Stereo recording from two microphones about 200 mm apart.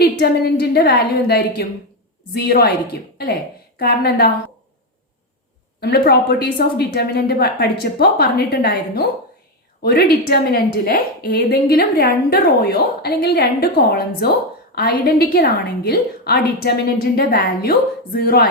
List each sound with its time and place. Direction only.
0.0 s a woman's voice: 50° left (ahead or behind)
5.8 s a woman's voice: 55° left (ahead or behind)